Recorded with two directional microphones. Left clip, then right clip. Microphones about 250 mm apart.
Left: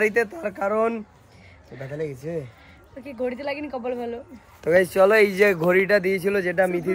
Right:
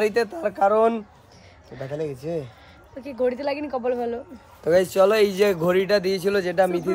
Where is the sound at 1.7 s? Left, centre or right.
Right.